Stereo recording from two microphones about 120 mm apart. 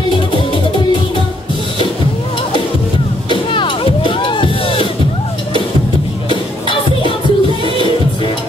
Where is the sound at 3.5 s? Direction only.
45° left (ahead or behind).